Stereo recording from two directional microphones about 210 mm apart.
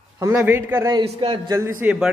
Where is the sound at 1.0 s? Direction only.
25° right (ahead or behind).